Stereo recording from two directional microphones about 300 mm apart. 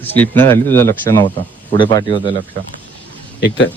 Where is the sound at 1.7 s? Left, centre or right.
Centre.